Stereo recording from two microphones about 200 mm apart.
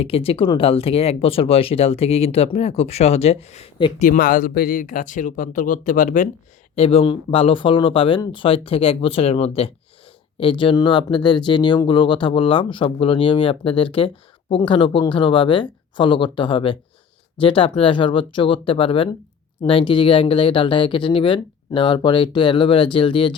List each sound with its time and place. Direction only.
0.0 s speech: 30° left (ahead or behind)
4.0 s speech: 40° left (ahead or behind)
6.7 s speech: 30° left (ahead or behind)